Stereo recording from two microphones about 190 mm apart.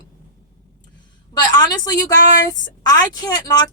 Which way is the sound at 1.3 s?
20° left (ahead or behind).